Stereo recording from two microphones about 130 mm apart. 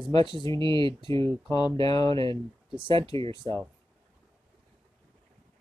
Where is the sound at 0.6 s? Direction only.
40° right (ahead or behind).